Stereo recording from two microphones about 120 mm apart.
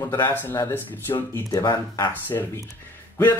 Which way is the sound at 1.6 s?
40° left (ahead or behind).